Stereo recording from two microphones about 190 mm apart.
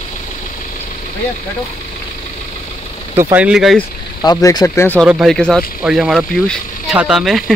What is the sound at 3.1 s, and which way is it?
Speech, 10° right (ahead or behind).